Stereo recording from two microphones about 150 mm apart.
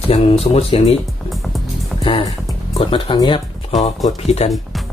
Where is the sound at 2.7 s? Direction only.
35° left (ahead or behind).